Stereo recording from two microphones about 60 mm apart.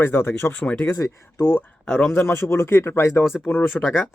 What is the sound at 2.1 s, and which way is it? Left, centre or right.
Speech, left.